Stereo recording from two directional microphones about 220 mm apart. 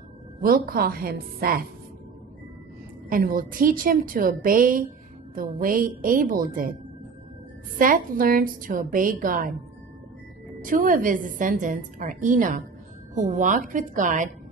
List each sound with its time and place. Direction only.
0.4 s a woman's voice: 40° right (ahead or behind)
3.1 s a woman's voice: 40° right (ahead or behind)
7.8 s a woman's voice: 40° right (ahead or behind)
10.6 s a woman's voice: 40° right (ahead or behind)